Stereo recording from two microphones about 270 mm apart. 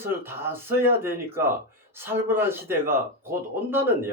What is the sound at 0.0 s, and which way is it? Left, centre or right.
Speech, centre.